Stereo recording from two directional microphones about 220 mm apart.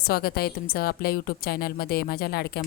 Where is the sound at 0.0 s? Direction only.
45° left (ahead or behind).